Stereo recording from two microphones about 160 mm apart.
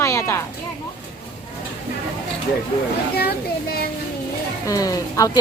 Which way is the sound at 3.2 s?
75° left (ahead or behind).